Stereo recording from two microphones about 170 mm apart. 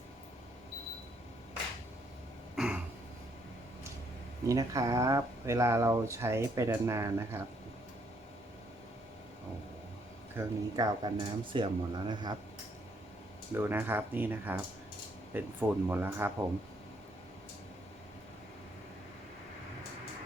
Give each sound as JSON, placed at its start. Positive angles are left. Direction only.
{"t": 2.6, "sound": "a sound", "side_deg": -5}
{"t": 4.4, "sound": "speech", "side_deg": -20}
{"t": 10.3, "sound": "speech", "side_deg": -25}
{"t": 13.5, "sound": "speech", "side_deg": -10}